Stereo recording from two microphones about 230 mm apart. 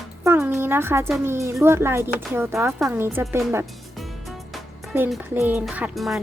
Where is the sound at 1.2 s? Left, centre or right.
Centre.